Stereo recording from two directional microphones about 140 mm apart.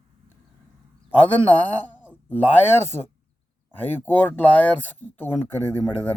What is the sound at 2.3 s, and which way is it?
Speech, 15° left (ahead or behind).